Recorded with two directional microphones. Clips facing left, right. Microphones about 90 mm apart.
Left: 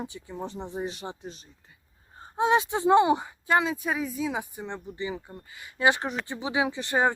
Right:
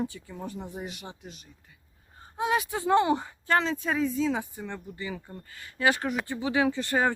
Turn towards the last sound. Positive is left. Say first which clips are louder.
# even
turn(degrees=20)  # may be behind; listen again after turning